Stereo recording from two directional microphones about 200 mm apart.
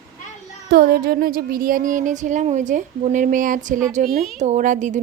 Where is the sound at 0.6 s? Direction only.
50° right (ahead or behind).